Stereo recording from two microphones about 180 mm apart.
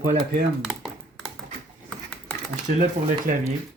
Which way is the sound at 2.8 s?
45° right (ahead or behind).